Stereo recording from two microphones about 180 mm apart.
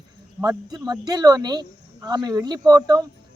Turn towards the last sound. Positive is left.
turn(degrees=-20)  # may be behind; listen again after turning